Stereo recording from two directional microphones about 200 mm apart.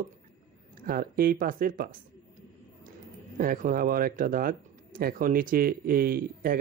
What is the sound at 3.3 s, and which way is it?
Speech, 45° right (ahead or behind).